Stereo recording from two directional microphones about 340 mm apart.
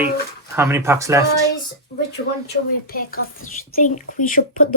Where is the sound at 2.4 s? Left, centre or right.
Left.